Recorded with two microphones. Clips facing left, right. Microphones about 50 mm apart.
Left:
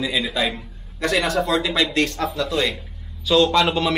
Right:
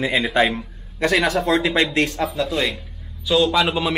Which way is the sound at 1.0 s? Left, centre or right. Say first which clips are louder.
Right 2 dB; right.